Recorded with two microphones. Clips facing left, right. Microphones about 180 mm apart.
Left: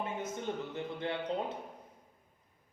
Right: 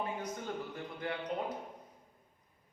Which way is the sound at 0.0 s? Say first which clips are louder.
Left 2 dB; 25° left (ahead or behind).